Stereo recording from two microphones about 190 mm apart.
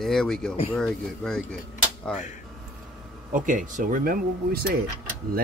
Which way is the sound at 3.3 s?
45° right (ahead or behind).